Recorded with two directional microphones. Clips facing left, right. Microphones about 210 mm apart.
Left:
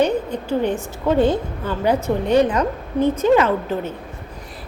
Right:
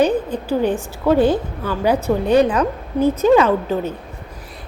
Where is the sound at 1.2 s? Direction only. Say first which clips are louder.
Right 2 dB; 25° left (ahead or behind).